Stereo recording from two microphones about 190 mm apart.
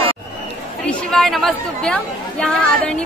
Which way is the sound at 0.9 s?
Centre (ahead or behind).